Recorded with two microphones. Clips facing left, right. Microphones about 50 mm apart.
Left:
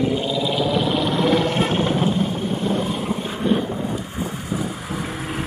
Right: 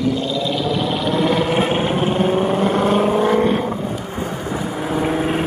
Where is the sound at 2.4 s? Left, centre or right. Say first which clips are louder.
Right 6 dB; right.